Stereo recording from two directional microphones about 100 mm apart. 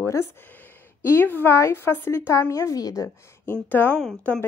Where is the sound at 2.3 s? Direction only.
35° left (ahead or behind).